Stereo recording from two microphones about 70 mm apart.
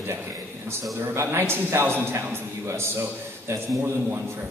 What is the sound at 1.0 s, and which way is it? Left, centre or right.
A man's voice, right.